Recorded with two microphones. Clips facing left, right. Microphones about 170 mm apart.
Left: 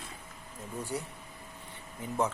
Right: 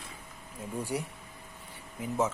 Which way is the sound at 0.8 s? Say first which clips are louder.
Right 2 dB; 10° right (ahead or behind).